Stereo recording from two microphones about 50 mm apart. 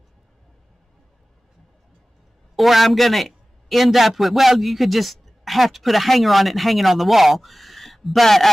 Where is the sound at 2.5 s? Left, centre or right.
Centre.